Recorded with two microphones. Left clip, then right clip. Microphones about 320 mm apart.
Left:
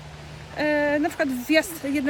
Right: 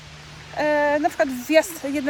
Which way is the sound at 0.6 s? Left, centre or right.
Centre.